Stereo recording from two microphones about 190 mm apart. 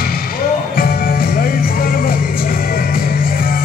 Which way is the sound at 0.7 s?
50° left (ahead or behind).